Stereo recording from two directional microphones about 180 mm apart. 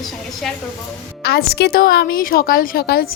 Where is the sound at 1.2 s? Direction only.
65° left (ahead or behind).